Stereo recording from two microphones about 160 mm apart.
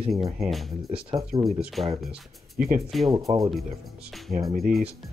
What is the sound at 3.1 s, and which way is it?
Speech, 20° right (ahead or behind).